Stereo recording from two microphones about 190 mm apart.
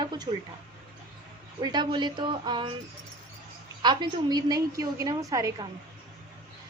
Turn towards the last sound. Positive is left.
turn(degrees=-15)  # may be behind; listen again after turning